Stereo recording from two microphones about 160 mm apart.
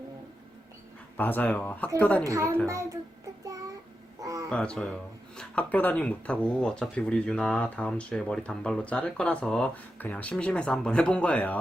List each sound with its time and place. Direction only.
1.1 s speech: 10° left (ahead or behind)
2.2 s a woman's voice: 20° right (ahead or behind)
4.2 s a sound: 20° right (ahead or behind)
4.4 s speech: 5° left (ahead or behind)